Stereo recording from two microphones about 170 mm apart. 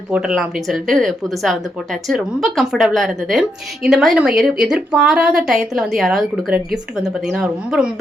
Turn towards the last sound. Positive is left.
turn(degrees=-5)  # may be behind; listen again after turning